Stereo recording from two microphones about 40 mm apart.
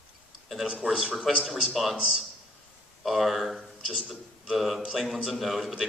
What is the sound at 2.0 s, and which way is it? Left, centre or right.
Speech, centre.